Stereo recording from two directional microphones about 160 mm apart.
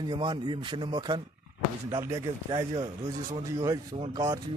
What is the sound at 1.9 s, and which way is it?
A man's voice, 20° right (ahead or behind).